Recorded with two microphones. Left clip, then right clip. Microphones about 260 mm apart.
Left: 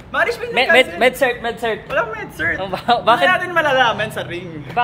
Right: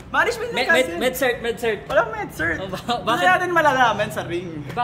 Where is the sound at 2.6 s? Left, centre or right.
Centre.